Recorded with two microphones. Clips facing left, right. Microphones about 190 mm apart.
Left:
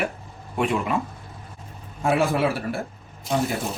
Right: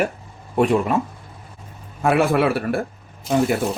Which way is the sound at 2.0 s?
60° right (ahead or behind).